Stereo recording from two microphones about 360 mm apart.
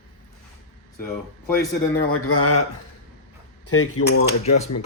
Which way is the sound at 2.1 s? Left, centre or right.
Left.